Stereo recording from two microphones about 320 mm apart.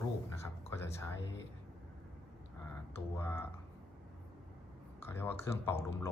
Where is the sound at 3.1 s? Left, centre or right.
Centre.